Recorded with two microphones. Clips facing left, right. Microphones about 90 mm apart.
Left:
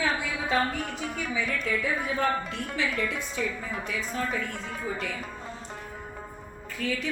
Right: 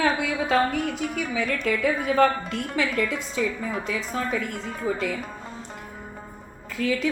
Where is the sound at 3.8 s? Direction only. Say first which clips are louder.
Right 1 dB; 90° right.